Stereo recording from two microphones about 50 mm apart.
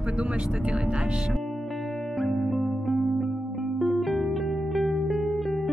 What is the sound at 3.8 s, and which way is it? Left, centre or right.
Music, centre.